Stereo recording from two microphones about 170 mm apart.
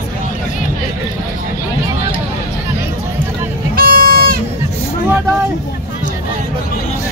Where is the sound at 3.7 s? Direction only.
60° right (ahead or behind).